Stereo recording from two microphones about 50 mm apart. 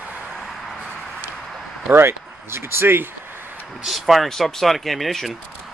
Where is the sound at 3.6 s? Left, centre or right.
Centre.